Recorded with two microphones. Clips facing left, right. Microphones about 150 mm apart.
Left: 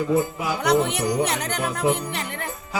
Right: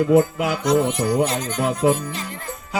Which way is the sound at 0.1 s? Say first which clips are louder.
Right 6 dB; 70° right (ahead or behind).